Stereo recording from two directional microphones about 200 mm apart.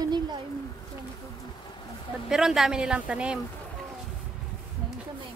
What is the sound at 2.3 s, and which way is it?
Speech, centre (ahead or behind).